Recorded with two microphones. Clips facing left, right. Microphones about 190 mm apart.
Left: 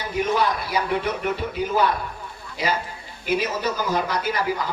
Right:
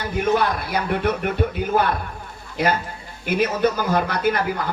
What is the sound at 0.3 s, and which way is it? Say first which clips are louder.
Speech: right 1 dB; 55° right (ahead or behind).